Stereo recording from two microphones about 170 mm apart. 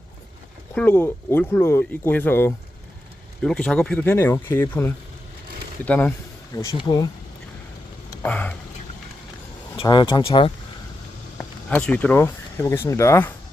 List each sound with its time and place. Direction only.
0.7 s speech: 10° left (ahead or behind)
6.6 s speech: 20° left (ahead or behind)
8.1 s a sound: 10° left (ahead or behind)
9.7 s speech: 25° left (ahead or behind)
11.3 s speech: 10° left (ahead or behind)